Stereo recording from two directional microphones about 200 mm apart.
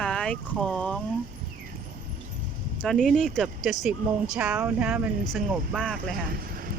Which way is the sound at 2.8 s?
5° left (ahead or behind).